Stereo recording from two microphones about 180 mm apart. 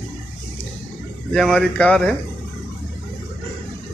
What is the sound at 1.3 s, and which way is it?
Speech, 5° left (ahead or behind).